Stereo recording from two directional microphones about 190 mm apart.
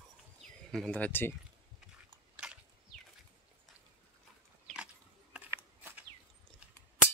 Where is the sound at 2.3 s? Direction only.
5° right (ahead or behind).